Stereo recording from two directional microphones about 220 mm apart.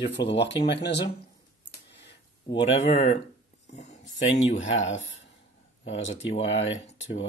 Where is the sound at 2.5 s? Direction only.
30° left (ahead or behind).